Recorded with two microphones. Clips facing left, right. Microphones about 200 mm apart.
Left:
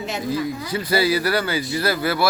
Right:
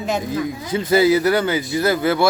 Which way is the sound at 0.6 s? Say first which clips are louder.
Right 8 dB; 25° right (ahead or behind).